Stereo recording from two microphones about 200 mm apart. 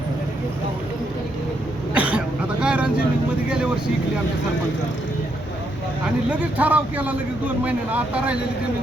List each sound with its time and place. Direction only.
1.9 s throat clearing: 5° right (ahead or behind)
6.2 s a man's voice: 5° right (ahead or behind)